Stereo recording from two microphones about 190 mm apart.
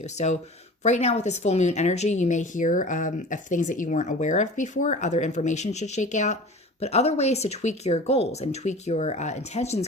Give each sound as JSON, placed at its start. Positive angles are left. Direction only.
{"t": 0.2, "sound": "speech", "side_deg": 35}